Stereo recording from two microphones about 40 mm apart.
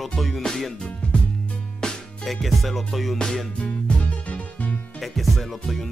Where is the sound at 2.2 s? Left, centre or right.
Centre.